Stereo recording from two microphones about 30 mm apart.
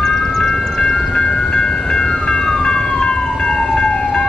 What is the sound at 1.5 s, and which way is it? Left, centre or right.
Music, left.